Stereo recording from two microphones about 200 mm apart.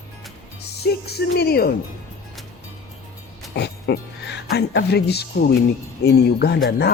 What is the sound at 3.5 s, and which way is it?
Speech, 55° left (ahead or behind).